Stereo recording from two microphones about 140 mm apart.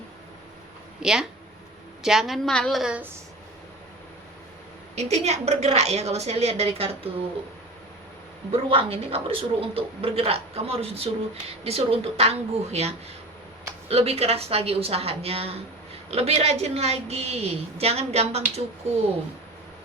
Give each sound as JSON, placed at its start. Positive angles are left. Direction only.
{"t": 1.0, "sound": "a woman's voice", "side_deg": -5}
{"t": 4.9, "sound": "a woman's voice", "side_deg": -50}
{"t": 8.5, "sound": "a woman's voice", "side_deg": -45}